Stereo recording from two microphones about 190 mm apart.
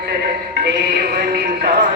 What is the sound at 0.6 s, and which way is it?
Music, 55° right (ahead or behind).